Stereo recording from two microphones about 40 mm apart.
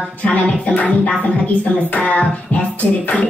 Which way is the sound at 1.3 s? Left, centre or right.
Left.